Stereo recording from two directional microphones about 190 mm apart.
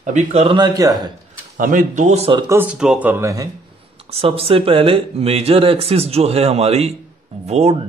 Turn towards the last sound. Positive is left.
turn(degrees=-35)  # may be behind; listen again after turning